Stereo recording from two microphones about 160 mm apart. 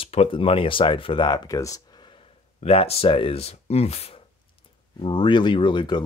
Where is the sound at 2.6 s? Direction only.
40° left (ahead or behind).